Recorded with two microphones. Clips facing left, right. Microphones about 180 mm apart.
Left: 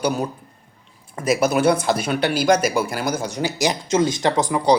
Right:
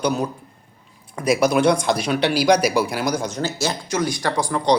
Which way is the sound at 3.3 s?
15° left (ahead or behind).